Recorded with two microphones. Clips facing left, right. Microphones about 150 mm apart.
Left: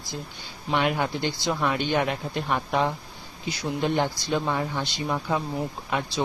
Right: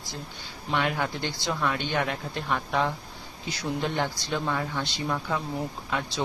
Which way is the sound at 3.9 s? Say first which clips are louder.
Left 4 dB; 20° left (ahead or behind).